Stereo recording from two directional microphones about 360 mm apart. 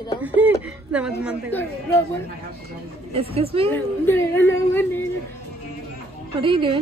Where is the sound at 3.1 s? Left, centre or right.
Centre.